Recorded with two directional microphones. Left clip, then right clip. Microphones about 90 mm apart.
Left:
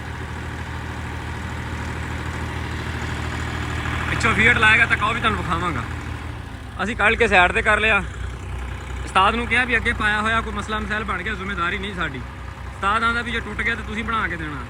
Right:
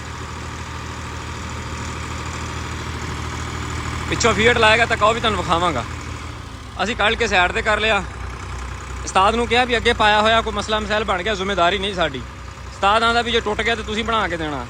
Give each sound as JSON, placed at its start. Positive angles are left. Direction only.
{"t": 1.8, "sound": "vehicle", "side_deg": -5}
{"t": 4.1, "sound": "speech", "side_deg": -25}
{"t": 5.4, "sound": "speech", "side_deg": -15}
{"t": 9.1, "sound": "speech", "side_deg": -35}
{"t": 9.8, "sound": "speech", "side_deg": -20}